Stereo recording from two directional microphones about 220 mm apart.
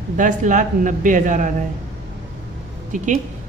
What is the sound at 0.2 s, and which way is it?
Speech, 35° right (ahead or behind).